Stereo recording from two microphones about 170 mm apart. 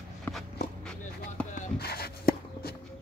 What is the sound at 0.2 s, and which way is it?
Walk, centre (ahead or behind).